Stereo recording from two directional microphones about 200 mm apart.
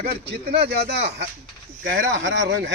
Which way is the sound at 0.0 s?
50° right (ahead or behind).